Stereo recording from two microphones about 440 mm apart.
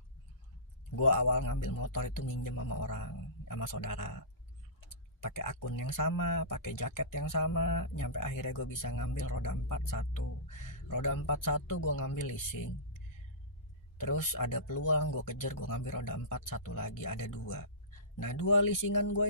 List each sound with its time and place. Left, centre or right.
0.9 s speech: left
5.2 s speech: left
13.9 s speech: left